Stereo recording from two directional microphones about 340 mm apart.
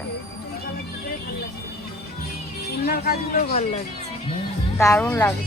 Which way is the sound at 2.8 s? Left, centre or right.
Left.